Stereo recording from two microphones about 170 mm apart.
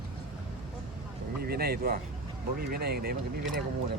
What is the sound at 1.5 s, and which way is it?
Speech, 65° right (ahead or behind).